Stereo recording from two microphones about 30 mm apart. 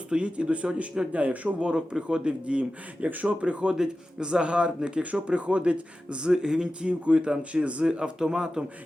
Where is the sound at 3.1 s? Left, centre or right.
Right.